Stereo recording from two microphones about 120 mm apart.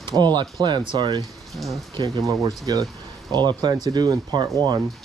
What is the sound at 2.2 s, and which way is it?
Speech, 30° right (ahead or behind).